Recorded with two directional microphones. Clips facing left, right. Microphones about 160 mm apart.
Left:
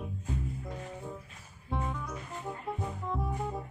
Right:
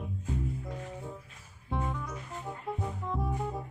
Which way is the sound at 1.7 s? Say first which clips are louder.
Right 1 dB; centre (ahead or behind).